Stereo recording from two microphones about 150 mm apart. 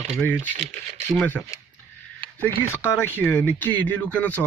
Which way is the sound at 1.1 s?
10° left (ahead or behind).